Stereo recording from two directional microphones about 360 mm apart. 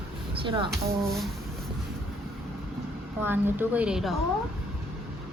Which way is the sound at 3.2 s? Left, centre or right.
Centre.